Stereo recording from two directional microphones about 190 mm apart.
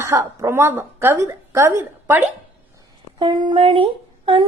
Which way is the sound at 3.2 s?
25° right (ahead or behind).